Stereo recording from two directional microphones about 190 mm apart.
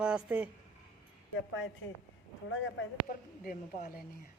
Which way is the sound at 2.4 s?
90° left.